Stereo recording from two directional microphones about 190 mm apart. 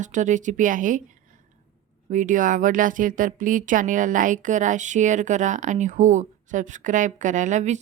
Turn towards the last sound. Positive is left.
turn(degrees=-40)  # may be behind; listen again after turning